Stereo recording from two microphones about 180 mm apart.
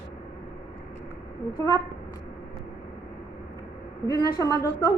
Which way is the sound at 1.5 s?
20° left (ahead or behind).